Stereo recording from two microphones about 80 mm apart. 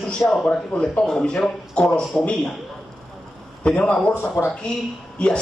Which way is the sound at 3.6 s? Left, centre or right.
Centre.